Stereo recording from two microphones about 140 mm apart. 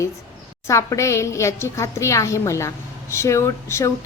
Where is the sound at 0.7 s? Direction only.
20° left (ahead or behind).